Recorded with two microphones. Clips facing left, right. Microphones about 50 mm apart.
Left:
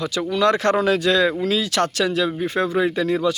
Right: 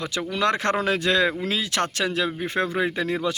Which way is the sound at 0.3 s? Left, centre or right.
Right.